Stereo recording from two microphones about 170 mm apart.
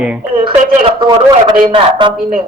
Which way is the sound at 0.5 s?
40° right (ahead or behind).